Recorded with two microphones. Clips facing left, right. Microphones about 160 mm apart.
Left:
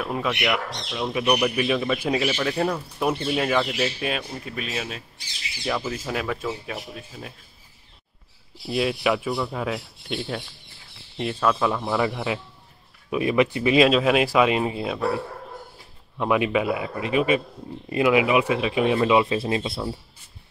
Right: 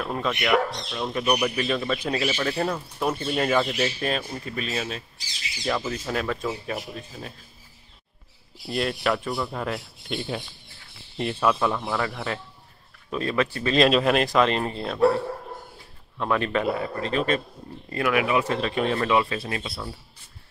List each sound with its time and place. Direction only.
0.0 s speech: 5° left (ahead or behind)
8.6 s speech: 5° left (ahead or behind)
13.8 s speech: centre (ahead or behind)
16.2 s speech: 10° left (ahead or behind)